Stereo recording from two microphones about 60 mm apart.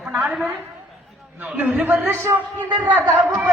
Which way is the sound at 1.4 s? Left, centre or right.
Right.